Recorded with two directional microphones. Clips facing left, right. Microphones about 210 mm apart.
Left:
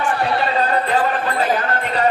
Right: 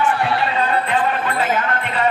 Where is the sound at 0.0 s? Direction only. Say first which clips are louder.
Even; 40° left (ahead or behind).